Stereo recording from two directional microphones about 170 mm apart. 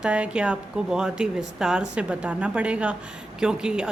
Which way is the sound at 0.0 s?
5° right (ahead or behind).